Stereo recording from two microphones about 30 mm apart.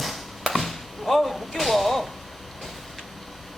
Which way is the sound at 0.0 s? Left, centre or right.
Centre.